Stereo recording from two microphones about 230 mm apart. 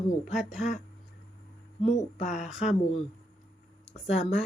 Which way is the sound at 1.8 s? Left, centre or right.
Left.